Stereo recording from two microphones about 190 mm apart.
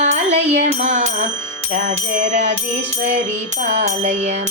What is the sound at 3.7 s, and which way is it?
Music, 40° right (ahead or behind).